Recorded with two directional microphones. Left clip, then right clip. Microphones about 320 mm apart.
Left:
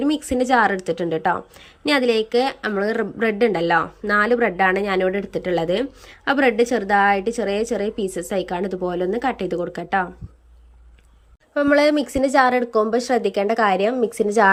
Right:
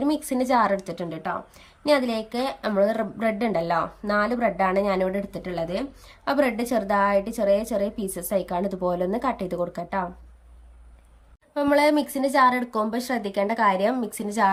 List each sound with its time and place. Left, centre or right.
0.0 s a woman's voice: centre
11.5 s a woman's voice: centre